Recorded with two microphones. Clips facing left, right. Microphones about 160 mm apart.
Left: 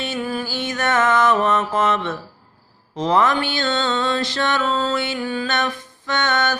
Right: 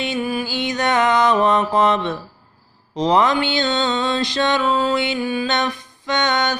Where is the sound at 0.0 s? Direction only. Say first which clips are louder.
Right 2 dB; 15° right (ahead or behind).